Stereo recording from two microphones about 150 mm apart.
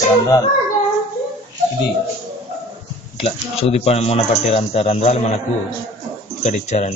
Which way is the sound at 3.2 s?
40° left (ahead or behind).